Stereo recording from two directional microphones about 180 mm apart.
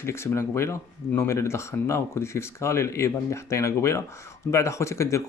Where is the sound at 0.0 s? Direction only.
15° left (ahead or behind).